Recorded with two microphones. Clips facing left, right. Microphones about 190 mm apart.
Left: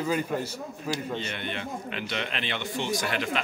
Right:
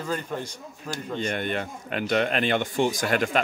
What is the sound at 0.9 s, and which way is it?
Speech, 50° right (ahead or behind).